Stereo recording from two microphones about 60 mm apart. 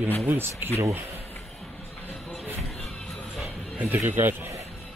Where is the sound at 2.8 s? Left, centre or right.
Centre.